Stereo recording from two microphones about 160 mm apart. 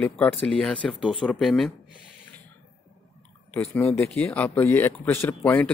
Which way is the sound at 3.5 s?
15° left (ahead or behind).